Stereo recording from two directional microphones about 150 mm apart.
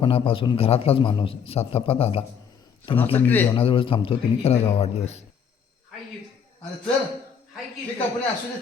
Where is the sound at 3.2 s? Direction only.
10° left (ahead or behind).